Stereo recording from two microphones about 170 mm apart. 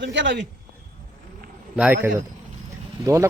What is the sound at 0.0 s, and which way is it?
Speech, 90° right.